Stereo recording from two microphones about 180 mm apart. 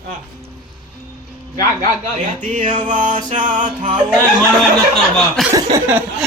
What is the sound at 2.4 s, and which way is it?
Music, 45° right (ahead or behind).